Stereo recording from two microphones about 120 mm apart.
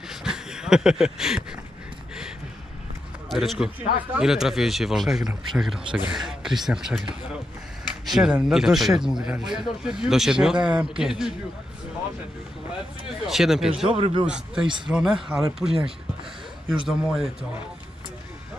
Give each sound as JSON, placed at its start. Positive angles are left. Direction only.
{"t": 0.1, "sound": "a sound", "side_deg": -5}
{"t": 3.3, "sound": "speech", "side_deg": 0}
{"t": 13.3, "sound": "speech", "side_deg": -5}
{"t": 13.9, "sound": "a man's voice", "side_deg": -55}
{"t": 14.2, "sound": "speech", "side_deg": -5}
{"t": 16.8, "sound": "speech", "side_deg": -5}